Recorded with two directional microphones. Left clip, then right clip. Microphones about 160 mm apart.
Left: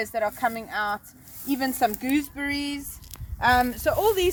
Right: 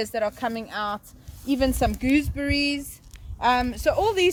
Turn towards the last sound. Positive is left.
turn(degrees=-40)  # may be behind; listen again after turning